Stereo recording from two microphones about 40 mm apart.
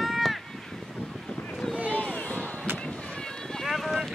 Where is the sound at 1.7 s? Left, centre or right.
Right.